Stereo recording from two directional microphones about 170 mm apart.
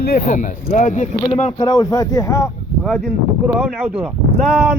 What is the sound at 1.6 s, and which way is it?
Speech, 20° left (ahead or behind).